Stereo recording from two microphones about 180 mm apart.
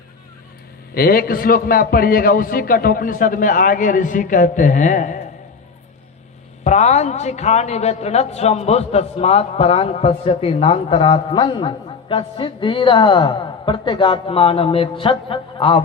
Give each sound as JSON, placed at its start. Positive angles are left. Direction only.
{"t": 0.9, "sound": "a man's voice", "side_deg": 55}
{"t": 6.7, "sound": "a woman's voice", "side_deg": 40}